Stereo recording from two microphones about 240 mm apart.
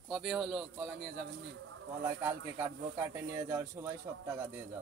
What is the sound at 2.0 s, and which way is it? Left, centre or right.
Speech, centre.